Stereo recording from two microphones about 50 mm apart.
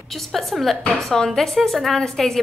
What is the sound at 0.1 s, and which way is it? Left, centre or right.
A woman's voice, centre.